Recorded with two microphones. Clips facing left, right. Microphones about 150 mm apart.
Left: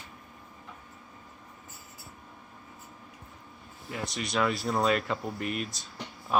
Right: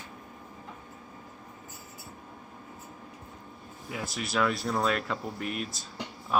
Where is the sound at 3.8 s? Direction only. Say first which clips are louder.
Even; 5° right (ahead or behind).